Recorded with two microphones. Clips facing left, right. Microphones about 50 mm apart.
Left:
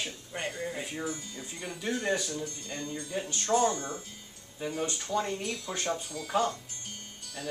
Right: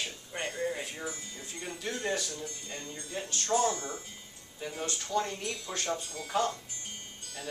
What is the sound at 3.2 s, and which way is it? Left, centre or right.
Speech, left.